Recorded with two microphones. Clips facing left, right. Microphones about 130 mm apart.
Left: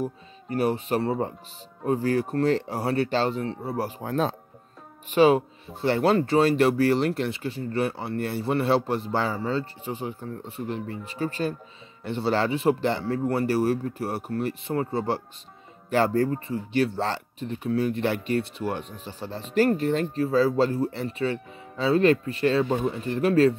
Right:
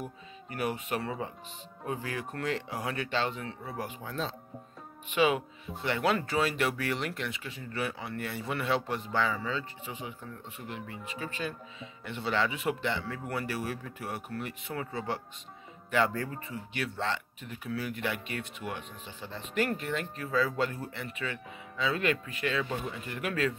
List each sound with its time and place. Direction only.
0.0 s speech: 30° left (ahead or behind)
4.0 s speech: 50° left (ahead or behind)
5.1 s speech: 35° left (ahead or behind)